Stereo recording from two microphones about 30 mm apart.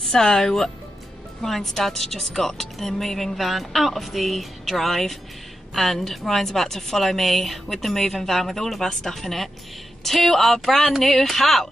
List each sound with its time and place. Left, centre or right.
0.0 s a woman's voice: centre
3.3 s a woman's voice: centre